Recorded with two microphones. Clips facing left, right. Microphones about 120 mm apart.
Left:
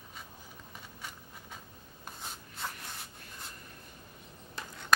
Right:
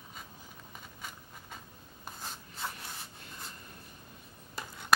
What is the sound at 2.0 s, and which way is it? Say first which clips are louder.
Writing: right 1 dB; centre (ahead or behind).